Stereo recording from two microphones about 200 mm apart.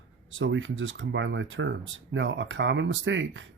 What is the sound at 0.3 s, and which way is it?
Speech, 70° right (ahead or behind).